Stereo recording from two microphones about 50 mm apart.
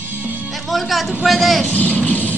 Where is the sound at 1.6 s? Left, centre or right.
Left.